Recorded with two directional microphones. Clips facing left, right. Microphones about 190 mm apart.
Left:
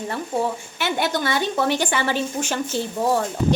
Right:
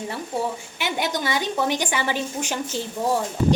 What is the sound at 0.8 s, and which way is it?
A woman's voice, 15° right (ahead or behind).